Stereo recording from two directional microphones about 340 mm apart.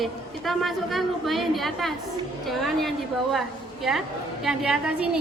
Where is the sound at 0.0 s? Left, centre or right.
Centre.